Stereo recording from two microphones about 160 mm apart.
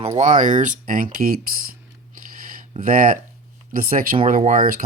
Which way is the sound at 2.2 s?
60° right (ahead or behind).